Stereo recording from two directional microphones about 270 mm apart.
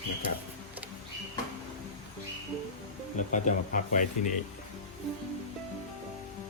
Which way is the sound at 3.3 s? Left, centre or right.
Left.